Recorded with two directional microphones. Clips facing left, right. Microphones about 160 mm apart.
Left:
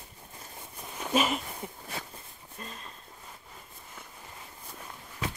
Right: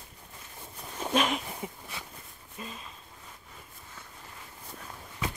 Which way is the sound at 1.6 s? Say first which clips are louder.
Left 1 dB; 5° right (ahead or behind).